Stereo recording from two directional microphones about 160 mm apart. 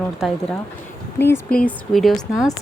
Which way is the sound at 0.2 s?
Centre (ahead or behind).